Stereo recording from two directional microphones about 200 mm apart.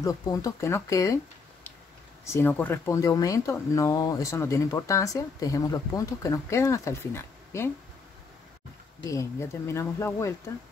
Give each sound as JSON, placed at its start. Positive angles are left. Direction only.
{"t": 0.0, "sound": "speech", "side_deg": 15}
{"t": 9.1, "sound": "speech", "side_deg": 15}